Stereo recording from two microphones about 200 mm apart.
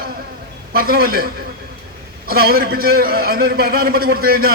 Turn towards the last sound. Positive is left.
turn(degrees=-50)  # may be behind; listen again after turning